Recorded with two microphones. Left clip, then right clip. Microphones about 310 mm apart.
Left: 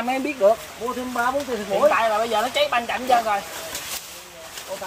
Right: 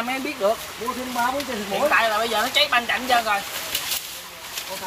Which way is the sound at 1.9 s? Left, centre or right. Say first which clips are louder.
Even; left.